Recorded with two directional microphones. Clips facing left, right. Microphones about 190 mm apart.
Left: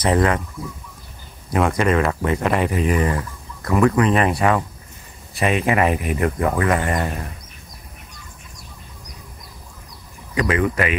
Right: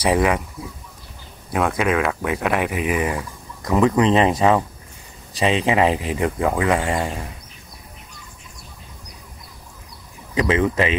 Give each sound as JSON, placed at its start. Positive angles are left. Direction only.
{"t": 0.0, "sound": "speech", "side_deg": -10}
{"t": 1.5, "sound": "speech", "side_deg": 0}
{"t": 5.7, "sound": "speech", "side_deg": -20}
{"t": 10.5, "sound": "speech", "side_deg": -25}